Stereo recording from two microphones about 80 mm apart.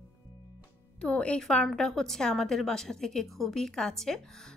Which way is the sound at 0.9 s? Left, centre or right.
Centre.